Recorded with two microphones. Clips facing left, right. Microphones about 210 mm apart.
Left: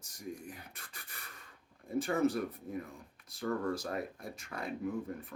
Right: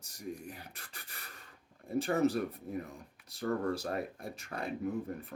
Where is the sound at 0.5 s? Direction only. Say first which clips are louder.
Right 1 dB; 30° right (ahead or behind).